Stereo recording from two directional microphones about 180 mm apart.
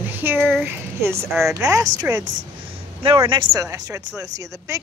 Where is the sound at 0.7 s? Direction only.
15° right (ahead or behind).